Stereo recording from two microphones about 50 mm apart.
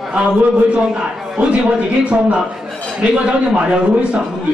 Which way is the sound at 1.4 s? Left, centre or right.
Right.